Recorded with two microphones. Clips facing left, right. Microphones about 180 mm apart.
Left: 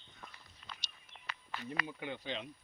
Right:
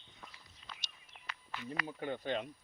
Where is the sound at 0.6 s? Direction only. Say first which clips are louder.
Left 1 dB; 55° left (ahead or behind).